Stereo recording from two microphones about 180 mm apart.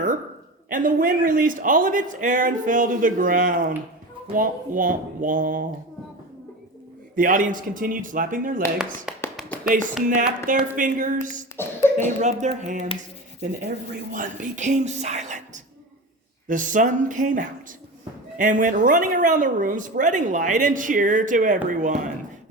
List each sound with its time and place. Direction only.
0.7 s a woman's voice: 50° right (ahead or behind)
7.2 s a woman's voice: 50° right (ahead or behind)
9.1 s tap: 5° right (ahead or behind)
9.6 s a woman's voice: 45° right (ahead or behind)
11.5 s beatboxing: 10° left (ahead or behind)
12.2 s a woman's voice: 40° right (ahead or behind)